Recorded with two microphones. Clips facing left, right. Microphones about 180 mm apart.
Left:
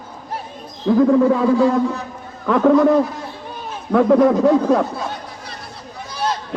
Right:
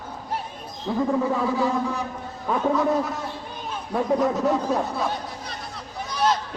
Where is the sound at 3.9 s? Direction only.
60° left (ahead or behind); by 4.9 s 90° left.